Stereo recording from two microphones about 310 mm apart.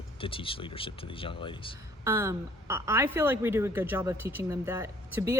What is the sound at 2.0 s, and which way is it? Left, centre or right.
Speech, centre.